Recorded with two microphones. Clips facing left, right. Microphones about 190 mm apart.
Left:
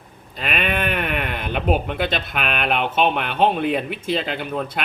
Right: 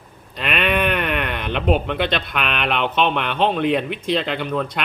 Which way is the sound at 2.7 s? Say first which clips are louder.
Even; 45° left (ahead or behind).